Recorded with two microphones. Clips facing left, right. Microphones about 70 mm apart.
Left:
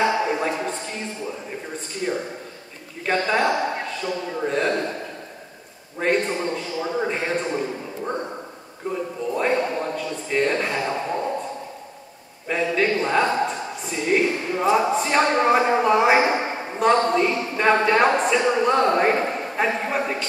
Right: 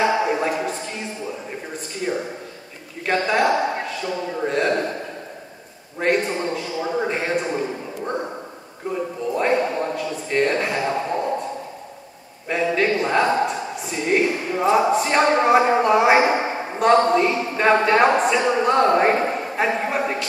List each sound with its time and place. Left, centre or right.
0.1 s a sound: centre
3.1 s a man's voice: centre
5.9 s a man's voice: centre
12.4 s a man's voice: centre